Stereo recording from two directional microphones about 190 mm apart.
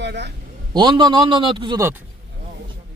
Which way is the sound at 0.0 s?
65° right (ahead or behind).